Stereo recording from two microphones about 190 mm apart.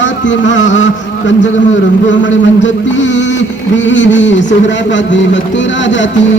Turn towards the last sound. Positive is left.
turn(degrees=70)  # may be behind; listen again after turning